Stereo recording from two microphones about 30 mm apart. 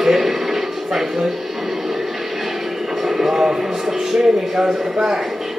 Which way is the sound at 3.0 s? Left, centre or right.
Centre.